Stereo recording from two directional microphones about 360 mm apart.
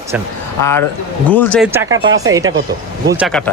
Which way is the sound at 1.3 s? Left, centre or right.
Centre.